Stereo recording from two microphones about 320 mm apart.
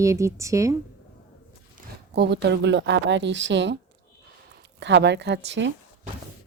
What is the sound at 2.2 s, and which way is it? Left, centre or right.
Speech, right.